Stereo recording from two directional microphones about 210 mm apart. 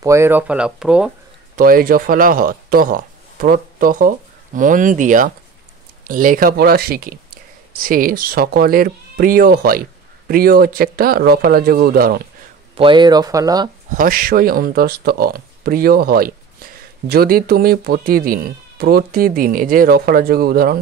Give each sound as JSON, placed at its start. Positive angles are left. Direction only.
{"t": 0.0, "sound": "speech", "side_deg": -15}
{"t": 1.6, "sound": "speech", "side_deg": -45}
{"t": 12.7, "sound": "speech", "side_deg": -25}
{"t": 13.8, "sound": "speech", "side_deg": -40}